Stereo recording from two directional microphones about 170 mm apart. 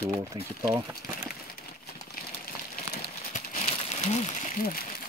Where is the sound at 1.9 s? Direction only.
60° left (ahead or behind).